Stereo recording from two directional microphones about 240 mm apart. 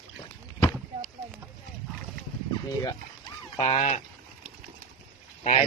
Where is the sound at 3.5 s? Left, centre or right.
Left.